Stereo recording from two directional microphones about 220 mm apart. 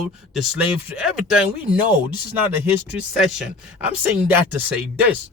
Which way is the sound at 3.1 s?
Centre (ahead or behind).